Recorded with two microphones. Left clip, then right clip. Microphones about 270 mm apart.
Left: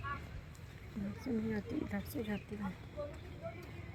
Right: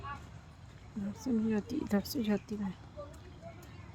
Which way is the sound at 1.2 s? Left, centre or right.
Centre.